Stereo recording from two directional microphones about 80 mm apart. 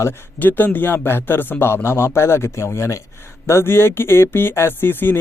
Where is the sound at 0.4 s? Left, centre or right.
Left.